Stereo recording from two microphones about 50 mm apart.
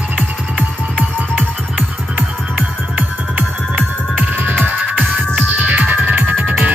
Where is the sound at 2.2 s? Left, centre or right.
Right.